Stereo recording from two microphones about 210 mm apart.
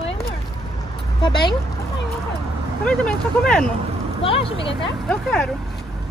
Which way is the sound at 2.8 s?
5° left (ahead or behind).